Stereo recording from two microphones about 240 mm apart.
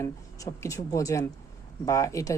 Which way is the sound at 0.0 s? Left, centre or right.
Centre.